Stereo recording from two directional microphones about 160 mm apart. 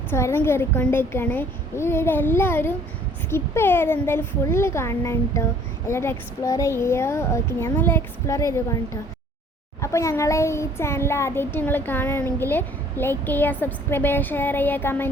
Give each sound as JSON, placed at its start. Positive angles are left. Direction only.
{"t": 0.1, "sound": "child singing", "side_deg": 15}
{"t": 9.8, "sound": "child singing", "side_deg": 20}